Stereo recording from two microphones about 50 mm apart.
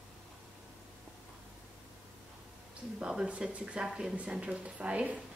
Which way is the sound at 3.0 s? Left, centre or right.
Centre.